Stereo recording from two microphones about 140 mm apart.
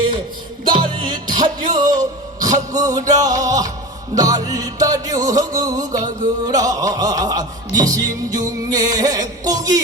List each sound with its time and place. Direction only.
0.7 s music: 35° right (ahead or behind)